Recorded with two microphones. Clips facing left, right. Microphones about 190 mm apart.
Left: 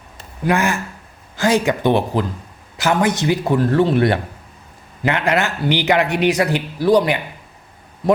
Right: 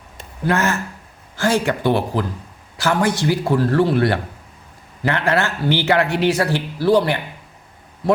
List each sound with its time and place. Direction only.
0.4 s a man's voice: 15° left (ahead or behind)